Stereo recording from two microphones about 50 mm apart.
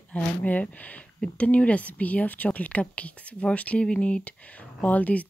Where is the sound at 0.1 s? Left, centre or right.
Left.